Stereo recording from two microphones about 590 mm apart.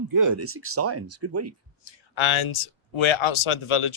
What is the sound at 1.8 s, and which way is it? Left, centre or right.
Speech, left.